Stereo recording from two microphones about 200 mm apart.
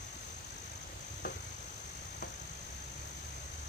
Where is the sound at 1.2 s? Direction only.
50° left (ahead or behind).